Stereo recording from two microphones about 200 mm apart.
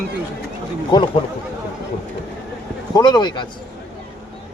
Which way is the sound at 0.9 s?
20° left (ahead or behind).